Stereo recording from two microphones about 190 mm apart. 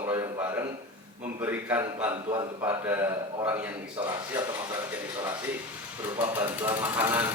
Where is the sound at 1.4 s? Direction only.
10° right (ahead or behind).